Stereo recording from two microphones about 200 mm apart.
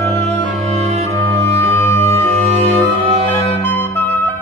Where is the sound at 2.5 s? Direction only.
30° right (ahead or behind).